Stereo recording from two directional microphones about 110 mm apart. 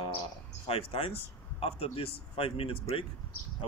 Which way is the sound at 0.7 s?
60° left (ahead or behind).